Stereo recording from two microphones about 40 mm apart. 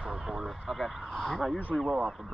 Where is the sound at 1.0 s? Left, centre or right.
Centre.